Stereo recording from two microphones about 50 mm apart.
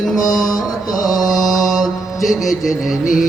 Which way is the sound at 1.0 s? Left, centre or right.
Centre.